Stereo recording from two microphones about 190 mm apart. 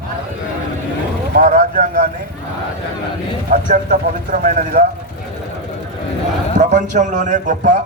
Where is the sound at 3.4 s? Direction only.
40° right (ahead or behind).